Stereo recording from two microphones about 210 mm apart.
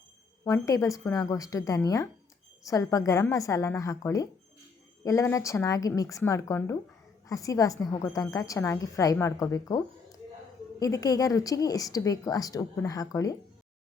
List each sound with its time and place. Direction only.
0.4 s a woman's voice: 15° left (ahead or behind)